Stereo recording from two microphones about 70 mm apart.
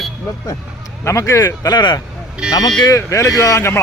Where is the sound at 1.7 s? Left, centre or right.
Left.